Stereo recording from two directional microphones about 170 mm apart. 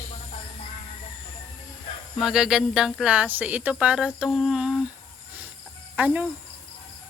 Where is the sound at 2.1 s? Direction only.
5° right (ahead or behind).